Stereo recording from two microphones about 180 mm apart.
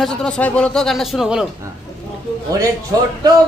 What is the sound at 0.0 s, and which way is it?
Speech, 5° left (ahead or behind).